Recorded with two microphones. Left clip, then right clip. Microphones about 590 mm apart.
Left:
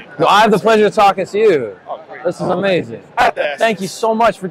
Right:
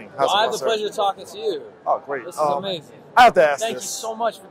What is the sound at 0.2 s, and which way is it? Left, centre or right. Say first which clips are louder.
A man's voice: left 8 dB; left.